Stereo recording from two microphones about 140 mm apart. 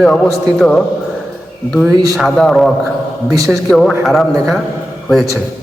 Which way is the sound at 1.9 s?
25° right (ahead or behind).